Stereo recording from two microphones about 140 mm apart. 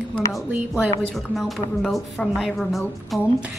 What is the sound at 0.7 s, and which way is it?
A woman's voice, centre (ahead or behind).